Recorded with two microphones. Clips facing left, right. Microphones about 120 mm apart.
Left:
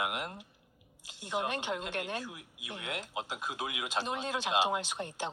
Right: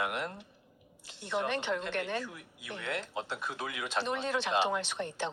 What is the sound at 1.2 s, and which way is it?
A woman's voice, 15° left (ahead or behind).